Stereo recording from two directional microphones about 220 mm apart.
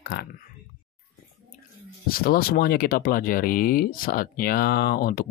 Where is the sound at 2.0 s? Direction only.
40° left (ahead or behind).